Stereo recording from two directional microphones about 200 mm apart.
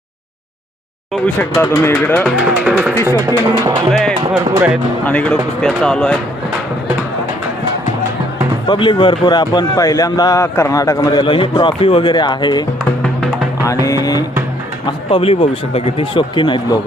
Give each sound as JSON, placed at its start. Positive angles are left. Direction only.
{"t": 1.1, "sound": "speech", "side_deg": 10}
{"t": 2.3, "sound": "speech", "side_deg": -5}
{"t": 2.9, "sound": "speech", "side_deg": 15}
{"t": 3.2, "sound": "speech", "side_deg": -20}
{"t": 5.0, "sound": "speech", "side_deg": 5}
{"t": 8.6, "sound": "a man's voice", "side_deg": 25}
{"t": 13.0, "sound": "music", "side_deg": 0}
{"t": 13.8, "sound": "a man's voice", "side_deg": 15}